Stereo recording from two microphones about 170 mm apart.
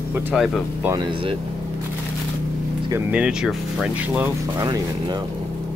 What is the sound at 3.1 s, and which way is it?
Speech, 5° right (ahead or behind).